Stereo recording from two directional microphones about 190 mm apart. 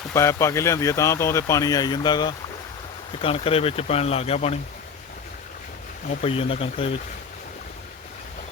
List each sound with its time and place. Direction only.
0.1 s speech: 15° left (ahead or behind); by 4.5 s 35° left (ahead or behind)
6.2 s speech: 30° left (ahead or behind)